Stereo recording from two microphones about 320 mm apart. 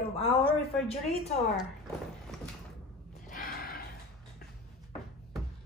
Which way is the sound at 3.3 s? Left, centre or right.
Left.